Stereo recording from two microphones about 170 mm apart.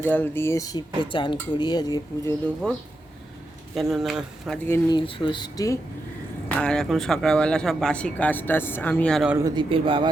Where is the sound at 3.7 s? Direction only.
Centre (ahead or behind).